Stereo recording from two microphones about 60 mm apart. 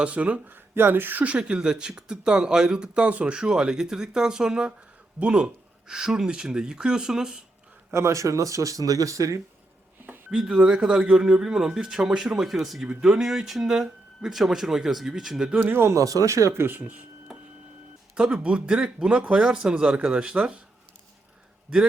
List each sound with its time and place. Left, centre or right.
0.0 s speech: right
0.4 s speech: right; by 7.3 s centre
7.9 s speech: right
10.3 s speech: centre
15.6 s speech: right
15.9 s speech: right
18.1 s speech: centre